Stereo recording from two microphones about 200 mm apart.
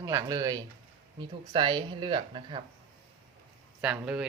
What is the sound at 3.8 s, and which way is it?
Speech, 5° right (ahead or behind).